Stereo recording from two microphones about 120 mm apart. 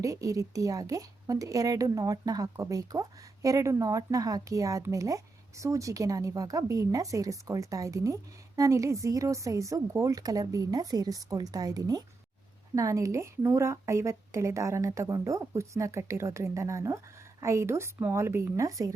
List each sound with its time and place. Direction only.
0.0 s a woman's voice: 30° right (ahead or behind)